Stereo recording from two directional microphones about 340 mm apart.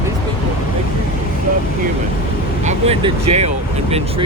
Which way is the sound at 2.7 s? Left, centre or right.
Centre.